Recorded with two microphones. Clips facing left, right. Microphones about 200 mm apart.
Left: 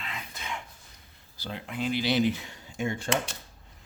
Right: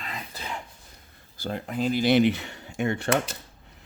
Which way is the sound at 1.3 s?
45° right (ahead or behind).